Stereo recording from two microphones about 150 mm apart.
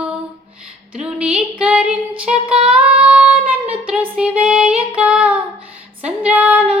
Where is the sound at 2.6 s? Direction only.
10° right (ahead or behind).